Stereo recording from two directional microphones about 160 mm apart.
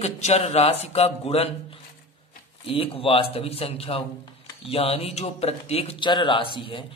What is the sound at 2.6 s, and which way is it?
Speech, 35° left (ahead or behind).